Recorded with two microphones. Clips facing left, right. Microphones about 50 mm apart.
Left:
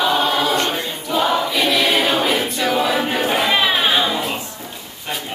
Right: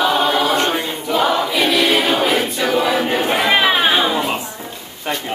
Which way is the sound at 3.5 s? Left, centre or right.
Centre.